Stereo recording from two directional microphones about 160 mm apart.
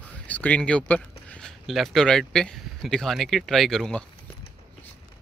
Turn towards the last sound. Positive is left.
turn(degrees=0)  # may be behind; listen again after turning